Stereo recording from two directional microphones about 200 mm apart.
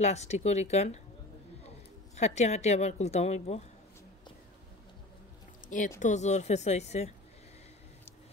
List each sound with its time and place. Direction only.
0.0 s speech: 35° left (ahead or behind)
2.1 s speech: 35° left (ahead or behind)
5.7 s speech: 40° left (ahead or behind)